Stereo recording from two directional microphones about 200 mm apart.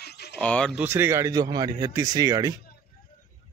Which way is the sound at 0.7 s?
10° right (ahead or behind).